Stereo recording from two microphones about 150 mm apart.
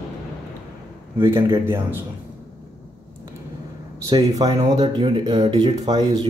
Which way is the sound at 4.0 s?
25° right (ahead or behind).